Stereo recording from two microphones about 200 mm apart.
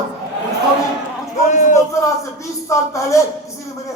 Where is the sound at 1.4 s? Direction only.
40° left (ahead or behind).